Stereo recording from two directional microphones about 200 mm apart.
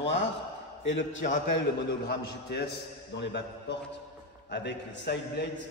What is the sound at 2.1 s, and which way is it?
A man's voice, 55° left (ahead or behind).